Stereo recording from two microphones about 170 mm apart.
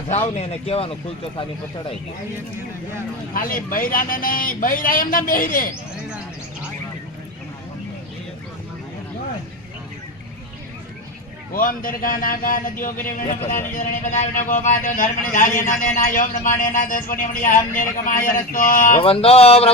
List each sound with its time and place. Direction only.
0.3 s music: 35° left (ahead or behind)
3.3 s a man's voice: 55° left (ahead or behind)
11.5 s a man's voice: 55° left (ahead or behind)
18.9 s music: 35° left (ahead or behind)